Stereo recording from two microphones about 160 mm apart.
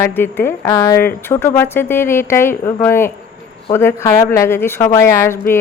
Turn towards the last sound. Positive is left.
turn(degrees=15)  # may be behind; listen again after turning